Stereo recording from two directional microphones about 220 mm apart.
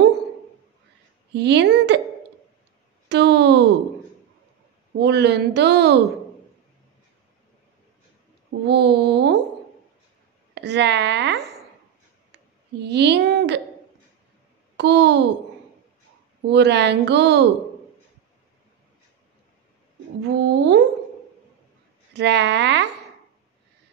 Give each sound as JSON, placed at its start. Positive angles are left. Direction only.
{"t": 1.3, "sound": "speech", "side_deg": -50}
{"t": 3.1, "sound": "speech", "side_deg": -50}
{"t": 4.9, "sound": "speech", "side_deg": -50}
{"t": 8.5, "sound": "speech", "side_deg": -50}
{"t": 10.5, "sound": "a sound", "side_deg": -50}
{"t": 12.8, "sound": "speech", "side_deg": -50}
{"t": 14.8, "sound": "speech", "side_deg": -50}
{"t": 16.4, "sound": "speech", "side_deg": -50}
{"t": 20.2, "sound": "speech", "side_deg": -50}
{"t": 22.1, "sound": "speech", "side_deg": -50}